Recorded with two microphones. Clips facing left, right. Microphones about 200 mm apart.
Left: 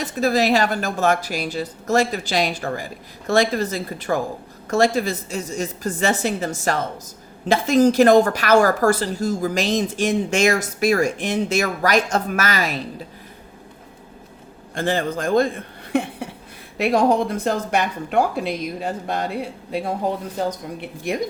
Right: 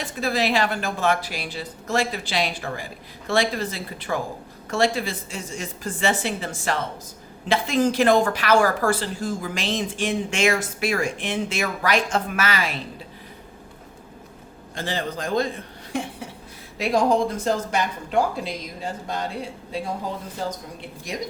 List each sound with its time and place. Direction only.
0.0 s a woman's voice: 45° left (ahead or behind)
14.8 s speech: 50° left (ahead or behind)
20.8 s speech: 60° left (ahead or behind)